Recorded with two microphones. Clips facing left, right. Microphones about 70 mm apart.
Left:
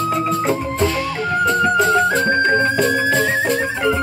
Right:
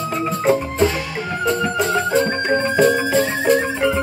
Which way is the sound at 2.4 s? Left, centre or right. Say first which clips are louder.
Even; centre.